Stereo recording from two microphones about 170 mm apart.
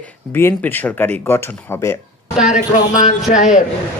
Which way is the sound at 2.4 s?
5° right (ahead or behind).